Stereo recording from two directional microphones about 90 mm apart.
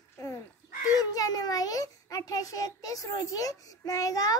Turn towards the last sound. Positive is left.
turn(degrees=40)  # may be behind; listen again after turning